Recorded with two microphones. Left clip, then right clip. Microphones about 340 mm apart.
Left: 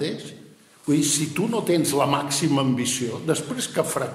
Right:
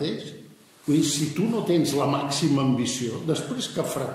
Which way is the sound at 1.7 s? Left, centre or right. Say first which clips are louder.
Left 2 dB; left.